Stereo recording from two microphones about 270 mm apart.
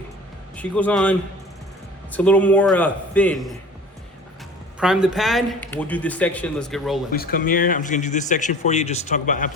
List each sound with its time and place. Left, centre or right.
0.5 s speech: centre
2.1 s speech: centre
4.8 s speech: centre
7.1 s speech: left